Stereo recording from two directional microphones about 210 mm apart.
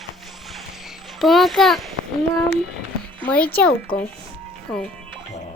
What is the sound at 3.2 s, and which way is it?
Speech, 5° left (ahead or behind).